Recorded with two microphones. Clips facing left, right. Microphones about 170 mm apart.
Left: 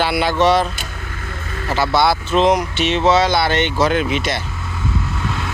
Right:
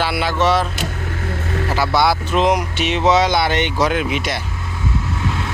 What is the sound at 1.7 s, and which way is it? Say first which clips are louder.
Speech: left 1 dB; 10° right (ahead or behind).